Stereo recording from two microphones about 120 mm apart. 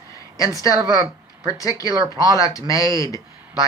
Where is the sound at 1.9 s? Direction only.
35° right (ahead or behind).